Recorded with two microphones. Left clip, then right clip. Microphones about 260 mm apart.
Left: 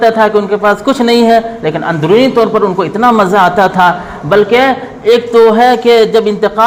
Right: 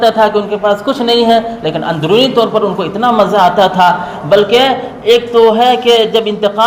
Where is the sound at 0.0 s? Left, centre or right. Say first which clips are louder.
Left 1 dB; left.